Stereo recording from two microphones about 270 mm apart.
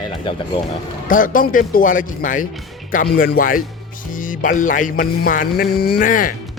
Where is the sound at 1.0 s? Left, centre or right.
Left.